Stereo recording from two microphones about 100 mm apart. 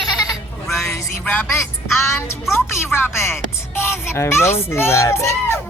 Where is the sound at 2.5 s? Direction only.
25° left (ahead or behind).